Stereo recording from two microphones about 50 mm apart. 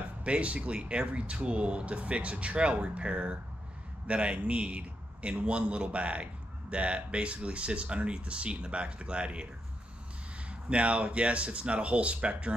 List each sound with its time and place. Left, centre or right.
0.2 s speech: right
10.5 s speech: right